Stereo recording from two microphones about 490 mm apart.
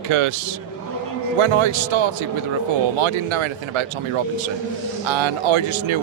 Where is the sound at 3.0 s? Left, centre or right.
Right.